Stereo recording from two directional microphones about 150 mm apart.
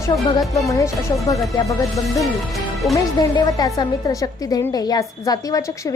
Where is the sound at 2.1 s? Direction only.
Centre (ahead or behind).